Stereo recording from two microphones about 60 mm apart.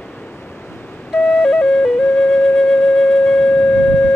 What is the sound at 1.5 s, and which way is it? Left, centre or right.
Music, centre.